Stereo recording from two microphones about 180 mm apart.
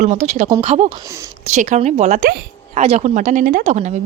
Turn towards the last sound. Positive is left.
turn(degrees=-40)  # may be behind; listen again after turning